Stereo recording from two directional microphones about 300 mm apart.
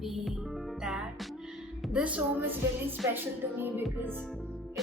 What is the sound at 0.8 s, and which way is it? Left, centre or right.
Music, centre.